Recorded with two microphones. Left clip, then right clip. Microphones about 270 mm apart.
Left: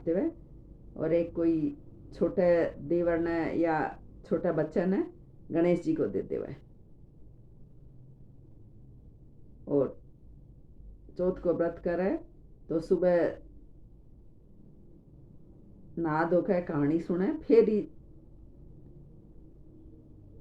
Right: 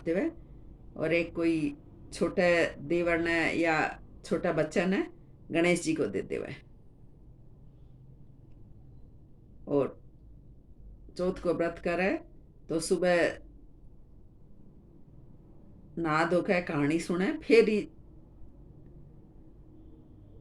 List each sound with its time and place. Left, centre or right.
0.1 s speech: right
0.9 s speech: right
11.2 s speech: right
16.0 s speech: right